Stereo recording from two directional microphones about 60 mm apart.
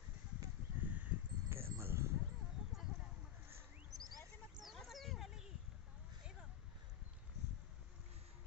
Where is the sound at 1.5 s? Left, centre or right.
Right.